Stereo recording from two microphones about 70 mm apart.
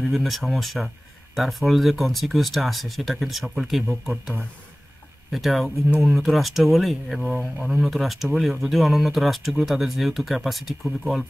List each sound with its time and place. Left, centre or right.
0.0 s speech: centre
4.1 s speech: right
5.3 s speech: centre